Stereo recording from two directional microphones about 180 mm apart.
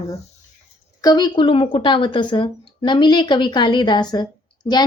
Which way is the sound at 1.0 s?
20° left (ahead or behind).